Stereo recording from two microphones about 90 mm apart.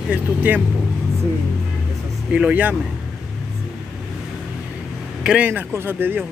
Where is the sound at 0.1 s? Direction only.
20° right (ahead or behind).